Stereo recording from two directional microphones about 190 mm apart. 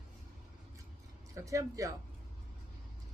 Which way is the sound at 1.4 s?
15° right (ahead or behind).